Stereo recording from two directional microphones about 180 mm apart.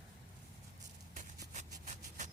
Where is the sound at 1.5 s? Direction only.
40° right (ahead or behind).